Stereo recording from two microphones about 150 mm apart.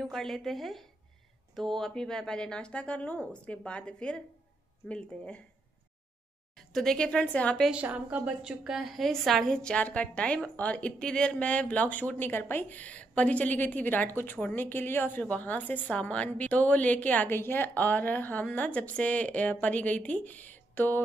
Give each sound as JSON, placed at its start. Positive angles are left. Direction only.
{"t": 0.0, "sound": "a woman's voice", "side_deg": 0}
{"t": 6.5, "sound": "a woman's voice", "side_deg": 0}
{"t": 7.7, "sound": "a woman's voice", "side_deg": -10}